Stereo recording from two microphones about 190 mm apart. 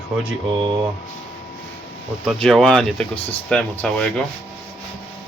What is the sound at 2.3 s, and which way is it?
Speech, 5° left (ahead or behind).